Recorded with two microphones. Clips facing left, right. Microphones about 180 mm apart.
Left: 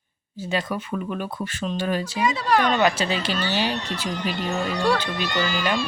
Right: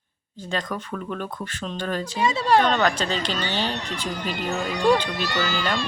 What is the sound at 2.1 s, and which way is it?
Speech, 25° right (ahead or behind).